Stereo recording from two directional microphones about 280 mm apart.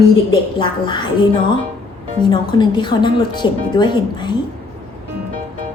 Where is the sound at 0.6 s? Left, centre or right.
Centre.